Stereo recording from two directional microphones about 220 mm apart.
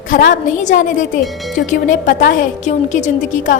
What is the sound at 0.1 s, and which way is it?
A woman's voice, 35° left (ahead or behind).